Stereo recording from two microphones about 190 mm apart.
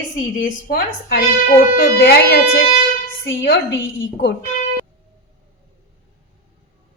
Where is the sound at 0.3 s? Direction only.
55° left (ahead or behind).